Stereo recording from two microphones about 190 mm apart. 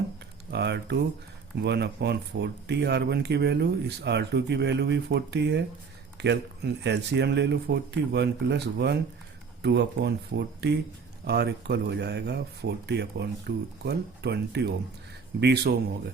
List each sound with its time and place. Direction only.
0.5 s speech: 65° right (ahead or behind)